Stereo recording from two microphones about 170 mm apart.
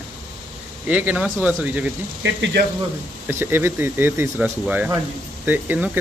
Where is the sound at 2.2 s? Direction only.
90° right.